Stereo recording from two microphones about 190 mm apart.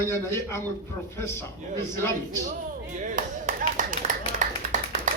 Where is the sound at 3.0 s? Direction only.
40° right (ahead or behind).